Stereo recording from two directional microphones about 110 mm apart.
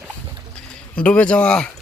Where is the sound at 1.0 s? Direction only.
10° left (ahead or behind).